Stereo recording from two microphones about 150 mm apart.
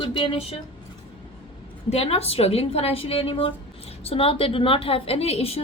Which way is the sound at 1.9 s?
45° left (ahead or behind).